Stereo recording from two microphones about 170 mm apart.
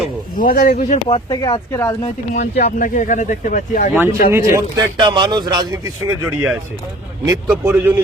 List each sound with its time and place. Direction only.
0.3 s speech: 55° left (ahead or behind)
1.0 s speech: 25° left (ahead or behind)
2.0 s speech: 45° left (ahead or behind)
3.9 s speech: 15° right (ahead or behind)
6.1 s speech: 5° right (ahead or behind)
7.6 s speech: 10° right (ahead or behind)